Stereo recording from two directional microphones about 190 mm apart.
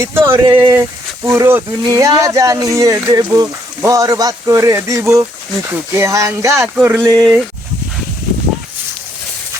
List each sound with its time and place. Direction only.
0.0 s speech: 15° right (ahead or behind)
6.6 s a sound: 5° right (ahead or behind)
7.0 s speech: 20° right (ahead or behind)